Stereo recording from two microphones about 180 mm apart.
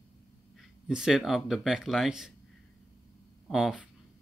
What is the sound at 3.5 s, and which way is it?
Speech, centre (ahead or behind).